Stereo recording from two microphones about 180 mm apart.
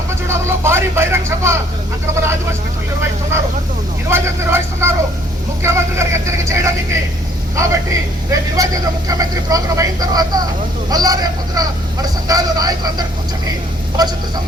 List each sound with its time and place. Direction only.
0.1 s vehicle: 15° right (ahead or behind)
2.1 s a man's voice: 15° right (ahead or behind)